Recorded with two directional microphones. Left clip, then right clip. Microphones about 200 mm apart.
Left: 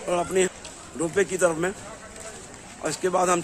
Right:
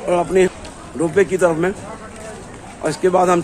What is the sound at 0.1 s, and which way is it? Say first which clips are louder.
Speech: right 8 dB; 10° left (ahead or behind).